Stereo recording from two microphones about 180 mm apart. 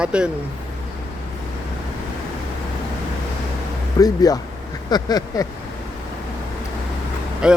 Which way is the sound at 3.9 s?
20° left (ahead or behind).